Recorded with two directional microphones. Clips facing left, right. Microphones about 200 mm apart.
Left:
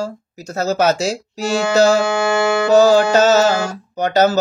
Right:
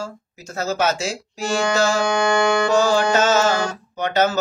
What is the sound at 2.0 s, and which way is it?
Music, 5° left (ahead or behind).